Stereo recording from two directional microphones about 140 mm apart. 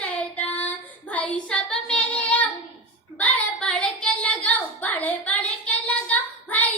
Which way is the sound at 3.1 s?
10° left (ahead or behind).